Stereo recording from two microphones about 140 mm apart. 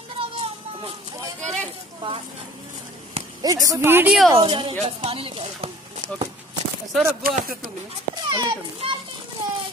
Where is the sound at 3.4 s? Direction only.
25° right (ahead or behind).